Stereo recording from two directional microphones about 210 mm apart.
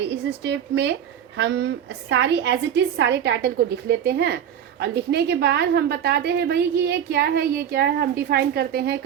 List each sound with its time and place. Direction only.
0.0 s a woman's voice: 55° right (ahead or behind)